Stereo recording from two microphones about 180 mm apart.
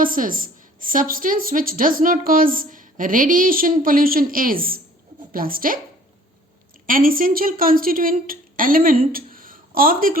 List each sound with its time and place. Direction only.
0.0 s a woman's voice: 50° right (ahead or behind)
6.8 s a woman's voice: 50° right (ahead or behind)